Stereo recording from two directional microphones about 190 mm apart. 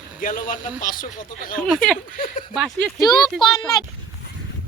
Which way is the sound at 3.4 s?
25° left (ahead or behind).